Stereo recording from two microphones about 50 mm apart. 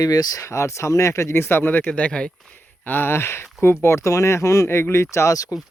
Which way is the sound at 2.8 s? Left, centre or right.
Left.